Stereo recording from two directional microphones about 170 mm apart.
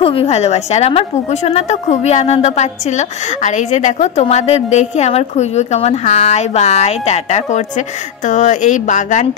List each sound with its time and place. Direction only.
0.0 s a woman's voice: 35° left (ahead or behind)